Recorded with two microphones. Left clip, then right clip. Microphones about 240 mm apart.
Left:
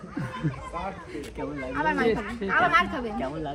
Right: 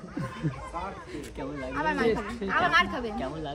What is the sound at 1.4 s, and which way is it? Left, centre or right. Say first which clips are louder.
Speech: left 3 dB; centre.